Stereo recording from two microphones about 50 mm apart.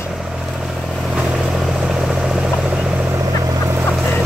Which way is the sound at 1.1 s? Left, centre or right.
Centre.